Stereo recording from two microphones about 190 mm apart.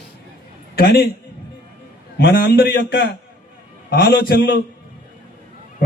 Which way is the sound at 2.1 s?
55° left (ahead or behind).